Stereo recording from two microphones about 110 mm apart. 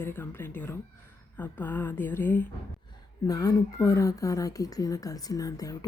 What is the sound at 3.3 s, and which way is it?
Speech, 35° left (ahead or behind).